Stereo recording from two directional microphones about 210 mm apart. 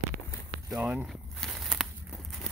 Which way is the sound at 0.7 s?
5° right (ahead or behind).